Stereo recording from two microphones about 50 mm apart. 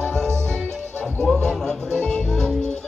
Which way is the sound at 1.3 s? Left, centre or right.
Centre.